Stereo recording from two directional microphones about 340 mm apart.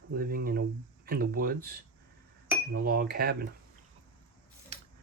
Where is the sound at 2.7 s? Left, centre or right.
Right.